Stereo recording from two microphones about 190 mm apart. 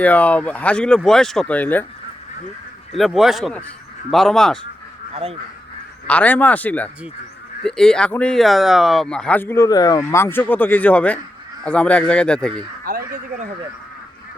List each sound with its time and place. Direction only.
0.0 s speech: 10° left (ahead or behind)
2.9 s speech: centre (ahead or behind)
5.1 s speech: 30° right (ahead or behind)
6.1 s speech: 10° left (ahead or behind)
12.9 s a sound: 50° right (ahead or behind)